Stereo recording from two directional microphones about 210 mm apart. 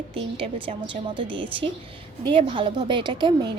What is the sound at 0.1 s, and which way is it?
A woman's voice, 25° right (ahead or behind).